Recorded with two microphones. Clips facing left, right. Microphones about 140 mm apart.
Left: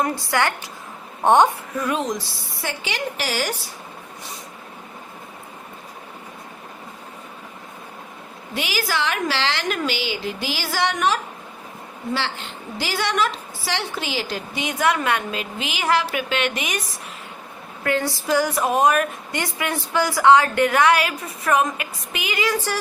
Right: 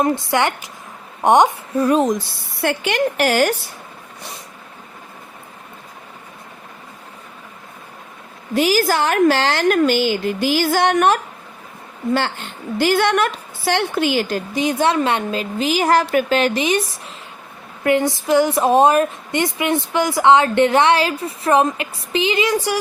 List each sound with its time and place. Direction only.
0.0 s a woman's voice: 25° right (ahead or behind)
1.7 s speech: 35° right (ahead or behind); by 3.5 s 55° right (ahead or behind)
8.5 s a woman's voice: 40° right (ahead or behind)
17.8 s a woman's voice: 20° right (ahead or behind)